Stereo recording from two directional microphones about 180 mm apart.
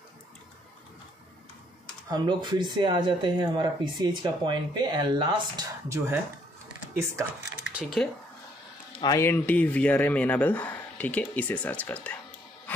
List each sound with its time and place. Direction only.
2.0 s speech: 25° right (ahead or behind)
7.6 s speech: centre (ahead or behind)
9.0 s speech: 15° left (ahead or behind)